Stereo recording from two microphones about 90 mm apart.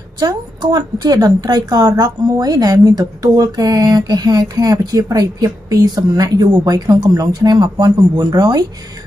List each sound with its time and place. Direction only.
0.2 s a woman's voice: 50° right (ahead or behind)